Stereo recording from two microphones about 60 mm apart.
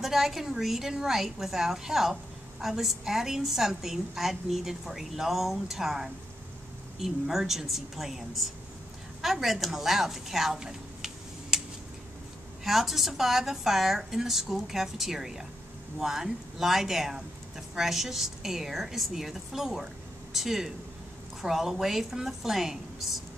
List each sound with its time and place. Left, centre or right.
0.0 s a woman's voice: centre
12.6 s a woman's voice: centre